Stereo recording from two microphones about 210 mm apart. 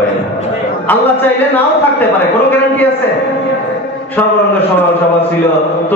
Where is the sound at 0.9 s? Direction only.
10° left (ahead or behind).